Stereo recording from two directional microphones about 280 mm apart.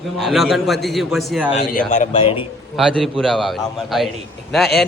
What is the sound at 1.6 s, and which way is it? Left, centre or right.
Speech, left.